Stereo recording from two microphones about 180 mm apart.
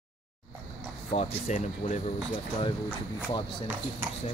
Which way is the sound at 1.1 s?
40° left (ahead or behind).